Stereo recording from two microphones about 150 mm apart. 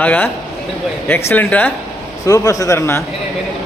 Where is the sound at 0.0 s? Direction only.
10° left (ahead or behind).